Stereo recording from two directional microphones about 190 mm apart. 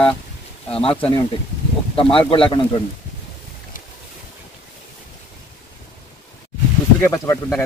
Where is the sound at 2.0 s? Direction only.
30° left (ahead or behind).